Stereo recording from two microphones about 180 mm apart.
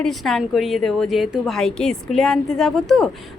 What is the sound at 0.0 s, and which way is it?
A woman's voice, centre (ahead or behind).